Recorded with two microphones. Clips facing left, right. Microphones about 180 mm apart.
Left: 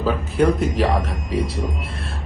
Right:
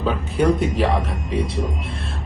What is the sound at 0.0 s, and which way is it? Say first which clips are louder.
Speech: left 1 dB; centre (ahead or behind).